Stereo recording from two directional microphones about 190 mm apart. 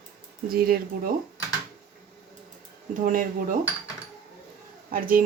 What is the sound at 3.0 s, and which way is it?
Speech, 45° right (ahead or behind).